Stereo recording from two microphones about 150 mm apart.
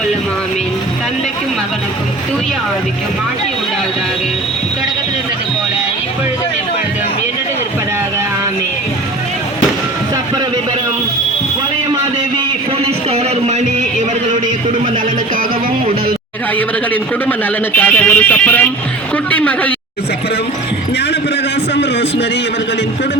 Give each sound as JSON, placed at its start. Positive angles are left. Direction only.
{"t": 12.8, "sound": "music", "side_deg": -45}
{"t": 16.6, "sound": "speech", "side_deg": 10}